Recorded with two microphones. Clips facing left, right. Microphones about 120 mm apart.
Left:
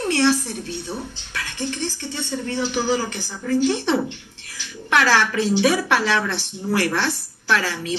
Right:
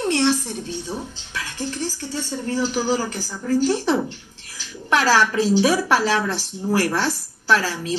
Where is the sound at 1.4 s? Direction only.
40° right (ahead or behind).